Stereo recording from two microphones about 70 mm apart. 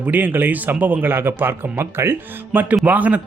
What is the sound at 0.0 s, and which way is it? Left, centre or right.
A man's voice, right.